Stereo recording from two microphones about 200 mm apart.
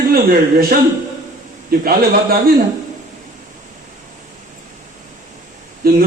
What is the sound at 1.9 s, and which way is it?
Speech, 45° right (ahead or behind).